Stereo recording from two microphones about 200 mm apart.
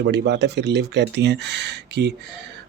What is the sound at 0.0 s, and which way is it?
Speech, 60° right (ahead or behind).